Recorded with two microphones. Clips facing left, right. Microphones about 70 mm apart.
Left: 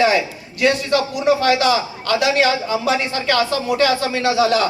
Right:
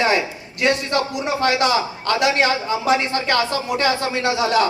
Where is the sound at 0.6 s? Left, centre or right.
Right.